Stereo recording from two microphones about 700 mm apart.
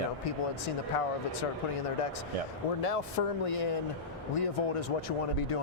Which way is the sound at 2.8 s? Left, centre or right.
Left.